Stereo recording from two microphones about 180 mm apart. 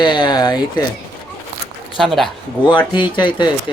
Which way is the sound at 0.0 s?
25° left (ahead or behind).